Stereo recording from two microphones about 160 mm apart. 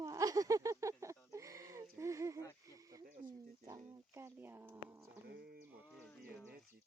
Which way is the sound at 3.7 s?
15° right (ahead or behind).